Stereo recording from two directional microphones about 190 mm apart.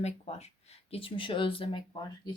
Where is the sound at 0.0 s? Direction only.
35° left (ahead or behind).